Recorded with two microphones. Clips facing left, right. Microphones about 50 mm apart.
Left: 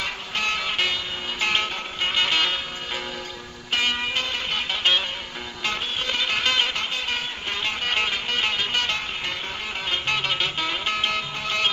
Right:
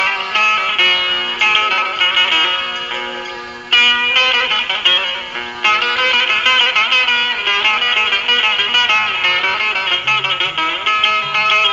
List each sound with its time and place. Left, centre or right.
0.0 s music: right
1.5 s music: right
1.7 s music: right
3.7 s music: right
5.6 s music: right